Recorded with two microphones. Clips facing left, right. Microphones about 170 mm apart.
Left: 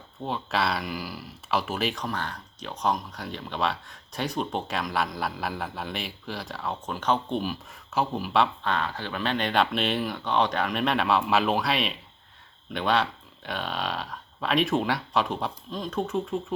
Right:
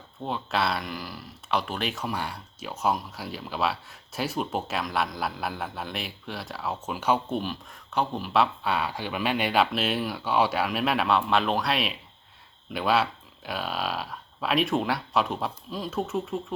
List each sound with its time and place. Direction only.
0.2 s speech: centre (ahead or behind)